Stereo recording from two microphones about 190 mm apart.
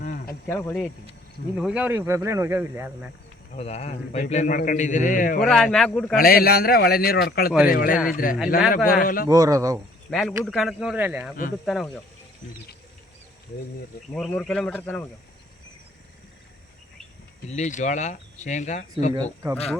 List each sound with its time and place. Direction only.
0.0 s a sound: 45° left (ahead or behind)
0.4 s speech: 10° left (ahead or behind)
1.5 s speech: 5° right (ahead or behind)
3.5 s a man's voice: 35° left (ahead or behind)
5.4 s speech: centre (ahead or behind)
6.1 s a man's voice: 50° left (ahead or behind)
9.3 s speech: 15° right (ahead or behind)
10.1 s speech: centre (ahead or behind)
14.1 s speech: 5° left (ahead or behind)
17.5 s a man's voice: 40° left (ahead or behind)
19.1 s speech: 20° right (ahead or behind)